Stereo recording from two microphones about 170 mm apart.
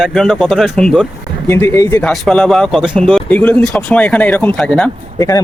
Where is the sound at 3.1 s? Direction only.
10° left (ahead or behind).